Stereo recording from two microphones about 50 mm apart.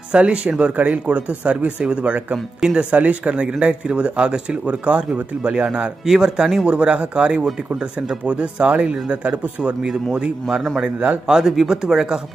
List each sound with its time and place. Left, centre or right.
0.1 s speech: right
2.9 s speech: right
6.7 s speech: right